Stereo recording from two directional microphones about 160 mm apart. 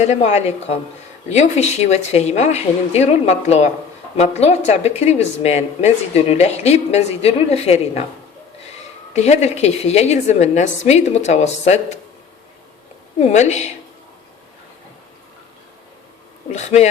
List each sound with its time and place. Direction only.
0.0 s a woman's voice: 45° left (ahead or behind)
9.1 s a woman's voice: 45° left (ahead or behind)
13.1 s a woman's voice: 45° left (ahead or behind)
16.5 s a woman's voice: 45° left (ahead or behind)